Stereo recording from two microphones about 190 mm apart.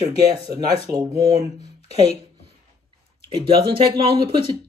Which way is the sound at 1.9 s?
35° left (ahead or behind).